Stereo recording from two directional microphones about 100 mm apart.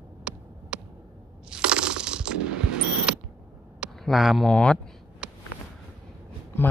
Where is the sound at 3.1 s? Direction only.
10° right (ahead or behind).